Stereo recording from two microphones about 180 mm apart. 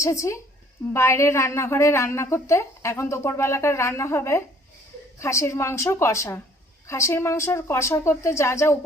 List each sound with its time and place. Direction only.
0.0 s a woman's voice: 15° left (ahead or behind)